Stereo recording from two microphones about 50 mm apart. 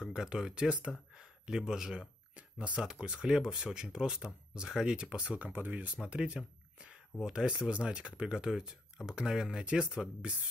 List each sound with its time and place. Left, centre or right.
0.0 s speech: centre
0.7 s speech: right
1.1 s a sound: centre
2.9 s speech: centre
5.5 s speech: right
6.0 s speech: right
8.3 s speech: centre
9.7 s speech: right